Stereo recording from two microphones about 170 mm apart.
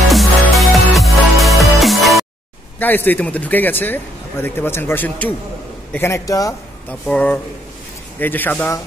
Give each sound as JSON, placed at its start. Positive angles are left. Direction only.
{"t": 0.1, "sound": "music", "side_deg": 0}
{"t": 2.8, "sound": "a man's voice", "side_deg": 10}
{"t": 6.9, "sound": "speech", "side_deg": 10}